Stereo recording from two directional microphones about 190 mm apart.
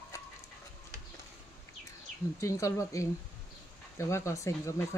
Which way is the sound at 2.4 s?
15° left (ahead or behind).